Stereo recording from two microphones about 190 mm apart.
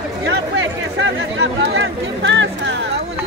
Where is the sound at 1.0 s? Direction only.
80° right.